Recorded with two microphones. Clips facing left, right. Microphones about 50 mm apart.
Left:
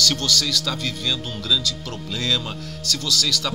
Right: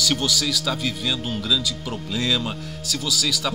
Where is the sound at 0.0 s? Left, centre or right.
Centre.